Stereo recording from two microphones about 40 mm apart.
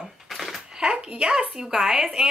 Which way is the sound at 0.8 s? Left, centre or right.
Right.